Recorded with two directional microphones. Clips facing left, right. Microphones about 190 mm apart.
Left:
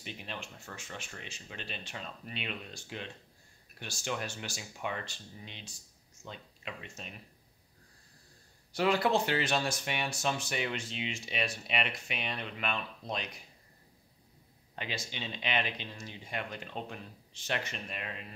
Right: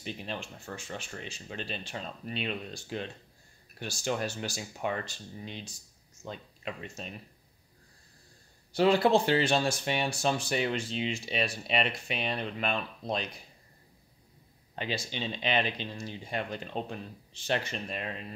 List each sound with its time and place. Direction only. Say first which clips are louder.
0.0 s speech: right 5 dB; 35° right (ahead or behind)
8.7 s speech: right 5 dB; 30° right (ahead or behind)
14.8 s speech: right 5 dB; 30° right (ahead or behind)